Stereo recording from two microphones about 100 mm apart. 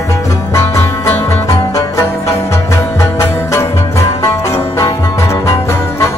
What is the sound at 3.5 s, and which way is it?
Music, 30° left (ahead or behind).